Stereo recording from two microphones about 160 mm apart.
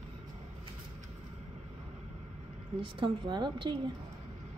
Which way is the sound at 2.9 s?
30° right (ahead or behind).